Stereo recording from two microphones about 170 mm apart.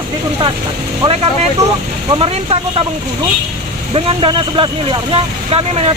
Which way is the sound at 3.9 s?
30° right (ahead or behind).